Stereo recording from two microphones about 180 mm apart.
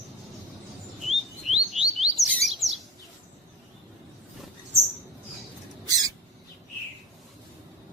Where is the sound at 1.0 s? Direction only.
Centre (ahead or behind).